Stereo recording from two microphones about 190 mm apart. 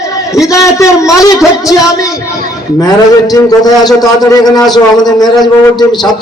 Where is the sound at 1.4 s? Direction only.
Centre (ahead or behind).